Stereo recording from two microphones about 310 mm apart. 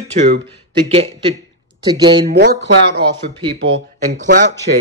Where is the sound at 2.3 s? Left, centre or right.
Right.